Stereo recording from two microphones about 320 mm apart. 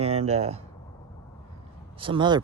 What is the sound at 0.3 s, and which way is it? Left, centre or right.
Speech, centre.